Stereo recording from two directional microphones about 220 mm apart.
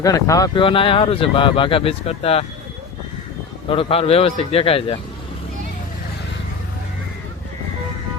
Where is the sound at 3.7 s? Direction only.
25° left (ahead or behind).